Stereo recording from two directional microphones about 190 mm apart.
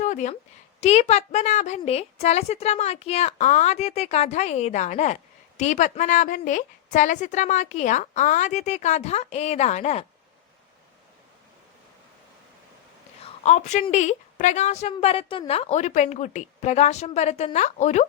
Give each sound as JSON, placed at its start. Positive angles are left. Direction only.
{"t": 0.0, "sound": "a sound", "side_deg": 40}
{"t": 0.8, "sound": "a woman's voice", "side_deg": 35}
{"t": 13.2, "sound": "a woman's voice", "side_deg": 35}